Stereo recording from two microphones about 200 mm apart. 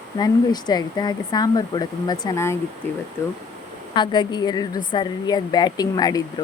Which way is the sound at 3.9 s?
20° left (ahead or behind).